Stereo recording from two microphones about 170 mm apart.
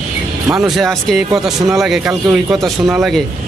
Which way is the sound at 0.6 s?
Centre (ahead or behind).